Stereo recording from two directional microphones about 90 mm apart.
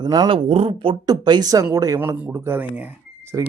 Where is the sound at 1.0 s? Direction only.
50° right (ahead or behind).